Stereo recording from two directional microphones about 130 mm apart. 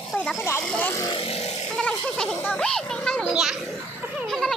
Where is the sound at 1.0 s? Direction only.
45° left (ahead or behind).